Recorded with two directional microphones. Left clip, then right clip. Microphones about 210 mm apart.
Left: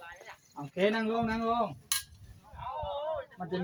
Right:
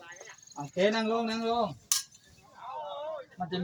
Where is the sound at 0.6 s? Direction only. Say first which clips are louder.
Right 2 dB; 5° left (ahead or behind).